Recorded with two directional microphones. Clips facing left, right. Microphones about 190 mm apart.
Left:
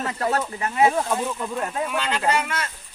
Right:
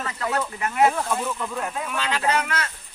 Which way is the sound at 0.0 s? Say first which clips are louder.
Left 2 dB; 45° left (ahead or behind).